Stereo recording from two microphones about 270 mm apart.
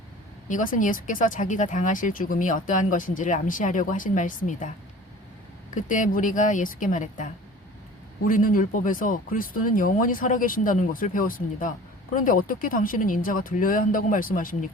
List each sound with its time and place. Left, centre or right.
0.4 s speech: left
5.7 s speech: left
8.3 s speech: left